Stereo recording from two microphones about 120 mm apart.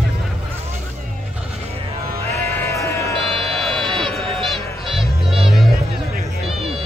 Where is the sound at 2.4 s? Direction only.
20° left (ahead or behind).